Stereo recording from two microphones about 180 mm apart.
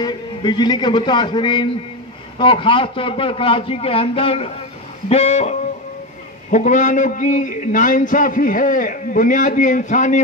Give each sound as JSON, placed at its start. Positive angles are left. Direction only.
{"t": 0.0, "sound": "a man's voice", "side_deg": 25}
{"t": 5.1, "sound": "music", "side_deg": 35}
{"t": 6.5, "sound": "a man's voice", "side_deg": 45}